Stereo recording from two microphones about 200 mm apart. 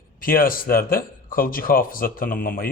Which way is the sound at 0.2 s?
45° left (ahead or behind).